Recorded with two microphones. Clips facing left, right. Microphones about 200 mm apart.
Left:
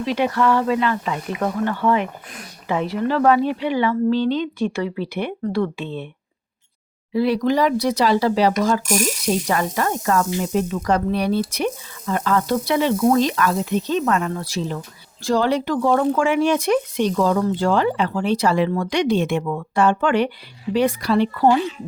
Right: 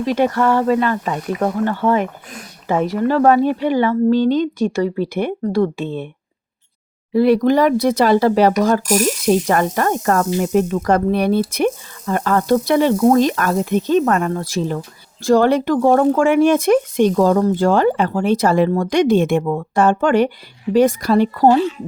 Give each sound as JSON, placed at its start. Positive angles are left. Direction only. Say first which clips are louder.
{"t": 0.0, "sound": "speech", "louder": "right 3 dB", "side_deg": -45}
{"t": 7.1, "sound": "speech", "louder": "right 5 dB", "side_deg": -50}